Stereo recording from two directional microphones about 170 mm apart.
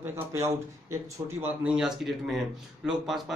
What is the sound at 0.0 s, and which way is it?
Speech, 15° right (ahead or behind).